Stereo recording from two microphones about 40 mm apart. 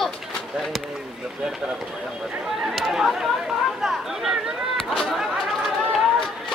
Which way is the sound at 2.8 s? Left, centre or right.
Centre.